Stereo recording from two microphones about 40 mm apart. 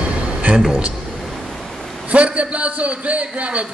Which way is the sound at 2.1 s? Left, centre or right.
Right.